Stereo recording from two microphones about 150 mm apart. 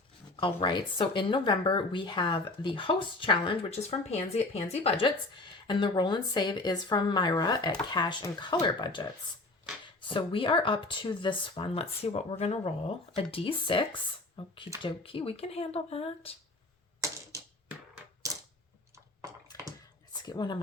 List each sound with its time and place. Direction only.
0.3 s speech: 35° left (ahead or behind)
10.1 s speech: 35° left (ahead or behind)
19.5 s a sound: 25° left (ahead or behind)
20.2 s speech: 30° left (ahead or behind)